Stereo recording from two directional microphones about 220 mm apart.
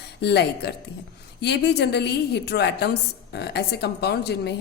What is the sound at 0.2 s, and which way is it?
A woman's voice, 50° left (ahead or behind).